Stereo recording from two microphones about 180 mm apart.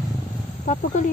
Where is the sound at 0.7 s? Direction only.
45° left (ahead or behind).